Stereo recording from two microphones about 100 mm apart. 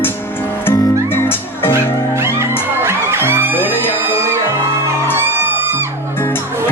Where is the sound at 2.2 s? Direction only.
25° right (ahead or behind).